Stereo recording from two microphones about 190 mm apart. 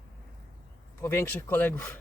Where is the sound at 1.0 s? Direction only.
15° left (ahead or behind).